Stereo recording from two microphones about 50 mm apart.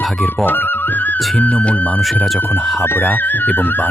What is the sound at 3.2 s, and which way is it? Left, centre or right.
Speech, left.